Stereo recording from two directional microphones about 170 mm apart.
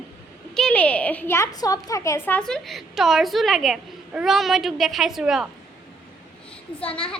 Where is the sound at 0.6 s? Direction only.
5° left (ahead or behind).